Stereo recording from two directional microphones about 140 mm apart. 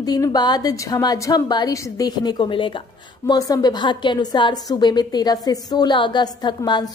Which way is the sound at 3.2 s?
25° left (ahead or behind).